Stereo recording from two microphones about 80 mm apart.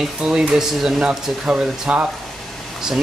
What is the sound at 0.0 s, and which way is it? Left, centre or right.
Speech, centre.